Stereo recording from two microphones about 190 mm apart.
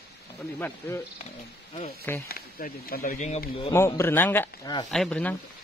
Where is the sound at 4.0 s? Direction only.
10° left (ahead or behind).